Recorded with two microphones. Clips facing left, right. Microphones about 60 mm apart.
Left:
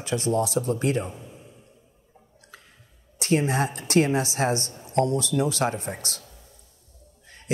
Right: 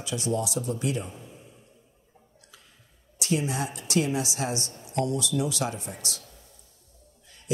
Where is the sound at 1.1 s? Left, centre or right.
Centre.